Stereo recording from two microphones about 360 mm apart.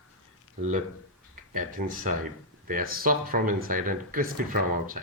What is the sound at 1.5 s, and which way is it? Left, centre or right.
Speech, right.